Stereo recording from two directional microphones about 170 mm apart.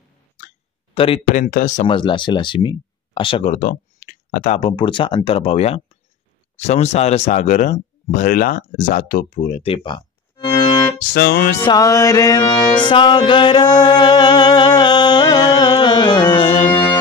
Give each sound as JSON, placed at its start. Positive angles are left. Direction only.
{"t": 0.9, "sound": "speech", "side_deg": 35}
{"t": 1.3, "sound": "speech", "side_deg": 50}
{"t": 1.9, "sound": "music", "side_deg": 30}
{"t": 3.5, "sound": "a sound", "side_deg": 55}
{"t": 4.6, "sound": "speech", "side_deg": 30}
{"t": 11.0, "sound": "speech", "side_deg": 60}
{"t": 11.6, "sound": "music", "side_deg": 20}